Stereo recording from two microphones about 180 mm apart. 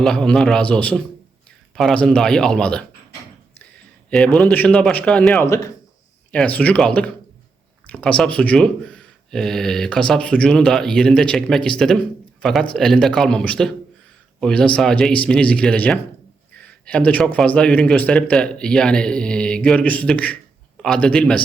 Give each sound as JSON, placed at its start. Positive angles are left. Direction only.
{"t": 0.0, "sound": "speech", "side_deg": 5}
{"t": 4.1, "sound": "speech", "side_deg": 5}
{"t": 5.5, "sound": "speech", "side_deg": 15}